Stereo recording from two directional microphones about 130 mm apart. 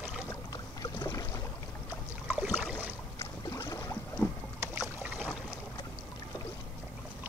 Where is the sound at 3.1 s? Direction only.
25° left (ahead or behind).